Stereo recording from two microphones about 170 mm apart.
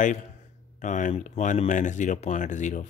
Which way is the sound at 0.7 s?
50° left (ahead or behind).